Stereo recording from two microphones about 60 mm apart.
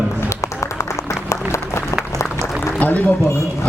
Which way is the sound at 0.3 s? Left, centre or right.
Left.